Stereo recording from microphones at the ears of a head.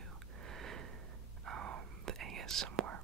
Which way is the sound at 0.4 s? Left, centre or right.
Right.